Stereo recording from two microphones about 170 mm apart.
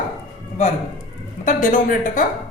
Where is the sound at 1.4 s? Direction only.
50° left (ahead or behind).